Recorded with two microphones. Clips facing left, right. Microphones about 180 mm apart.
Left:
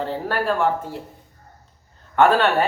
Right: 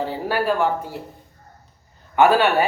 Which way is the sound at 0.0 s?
5° right (ahead or behind).